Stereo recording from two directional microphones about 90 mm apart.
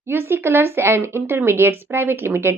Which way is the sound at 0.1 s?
25° right (ahead or behind).